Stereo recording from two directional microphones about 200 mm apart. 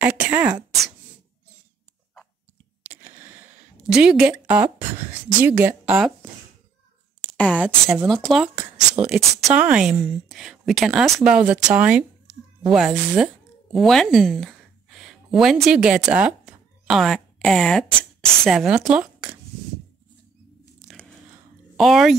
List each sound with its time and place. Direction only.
0.0 s a sound: 10° right (ahead or behind)
2.8 s a sound: 10° right (ahead or behind)
3.8 s a woman's voice: 5° right (ahead or behind)
7.5 s speech: 5° right (ahead or behind)
20.8 s biting: 5° left (ahead or behind)
21.7 s speech: centre (ahead or behind)